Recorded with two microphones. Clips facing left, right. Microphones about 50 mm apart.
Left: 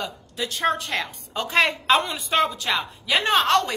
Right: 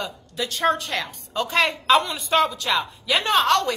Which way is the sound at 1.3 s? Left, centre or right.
Left.